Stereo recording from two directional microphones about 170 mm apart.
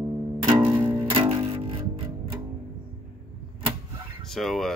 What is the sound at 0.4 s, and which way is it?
Music, 30° right (ahead or behind).